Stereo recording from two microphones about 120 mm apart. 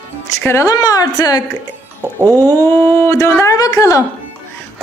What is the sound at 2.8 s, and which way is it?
Speech, 20° left (ahead or behind).